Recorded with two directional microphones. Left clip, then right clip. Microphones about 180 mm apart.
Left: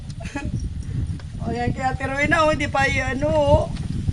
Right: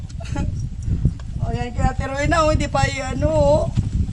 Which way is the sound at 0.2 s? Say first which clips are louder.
Right 1 dB; 10° right (ahead or behind).